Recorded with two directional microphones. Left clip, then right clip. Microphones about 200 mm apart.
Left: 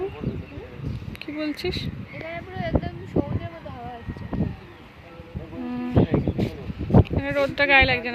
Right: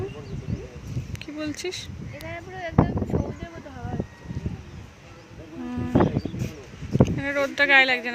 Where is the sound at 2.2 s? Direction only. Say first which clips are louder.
Left 2 dB; 40° right (ahead or behind).